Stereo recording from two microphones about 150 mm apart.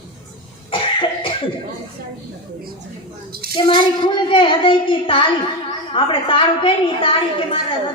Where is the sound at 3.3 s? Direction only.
90° right.